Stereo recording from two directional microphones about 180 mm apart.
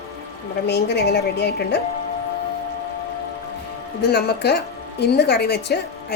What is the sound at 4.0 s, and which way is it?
Speech, 65° left (ahead or behind).